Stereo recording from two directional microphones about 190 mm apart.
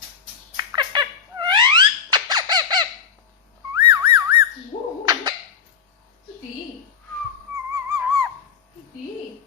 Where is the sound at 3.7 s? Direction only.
20° right (ahead or behind).